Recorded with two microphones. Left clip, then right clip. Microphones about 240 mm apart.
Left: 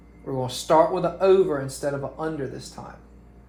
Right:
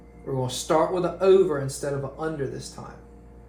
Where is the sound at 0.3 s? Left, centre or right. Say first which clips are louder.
Left 3 dB; left.